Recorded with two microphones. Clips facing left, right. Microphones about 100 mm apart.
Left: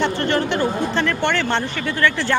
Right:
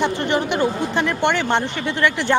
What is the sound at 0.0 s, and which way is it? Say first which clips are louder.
Speech: even; 15° right (ahead or behind).